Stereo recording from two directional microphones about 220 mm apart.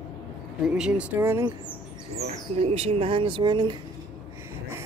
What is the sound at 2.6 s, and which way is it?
Speech, 30° right (ahead or behind).